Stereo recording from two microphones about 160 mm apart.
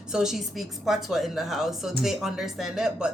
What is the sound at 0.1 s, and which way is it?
A woman's voice, 5° right (ahead or behind).